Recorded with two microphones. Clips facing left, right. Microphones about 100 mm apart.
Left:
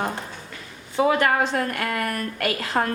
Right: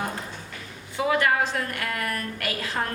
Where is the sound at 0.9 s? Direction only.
30° left (ahead or behind).